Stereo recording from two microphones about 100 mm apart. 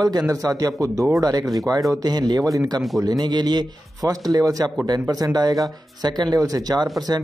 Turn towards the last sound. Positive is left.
turn(degrees=-40)  # may be behind; listen again after turning